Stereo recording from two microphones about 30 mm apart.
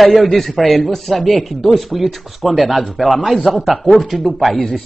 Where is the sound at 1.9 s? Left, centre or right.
Centre.